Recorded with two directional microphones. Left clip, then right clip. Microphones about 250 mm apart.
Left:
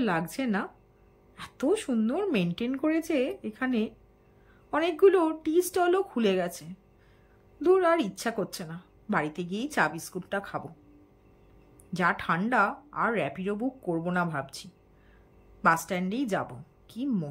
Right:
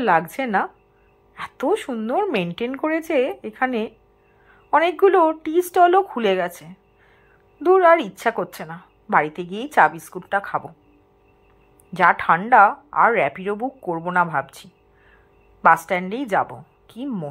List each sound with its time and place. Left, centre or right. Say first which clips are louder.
0.0 s a woman's voice: right 11 dB; centre
11.9 s a woman's voice: right 11 dB; centre
13.6 s speech: right 6 dB; right
14.0 s a woman's voice: right 14 dB; centre
15.9 s a woman's voice: right 9 dB; centre